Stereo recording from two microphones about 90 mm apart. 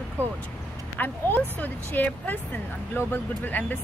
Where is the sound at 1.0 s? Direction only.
20° left (ahead or behind).